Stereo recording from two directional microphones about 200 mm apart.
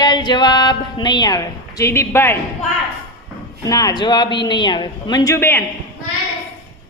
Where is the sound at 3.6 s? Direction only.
20° left (ahead or behind).